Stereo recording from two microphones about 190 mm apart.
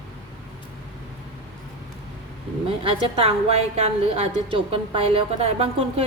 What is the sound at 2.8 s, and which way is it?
A woman's voice, 30° right (ahead or behind).